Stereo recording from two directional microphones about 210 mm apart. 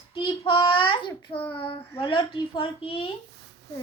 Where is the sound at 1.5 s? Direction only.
25° left (ahead or behind).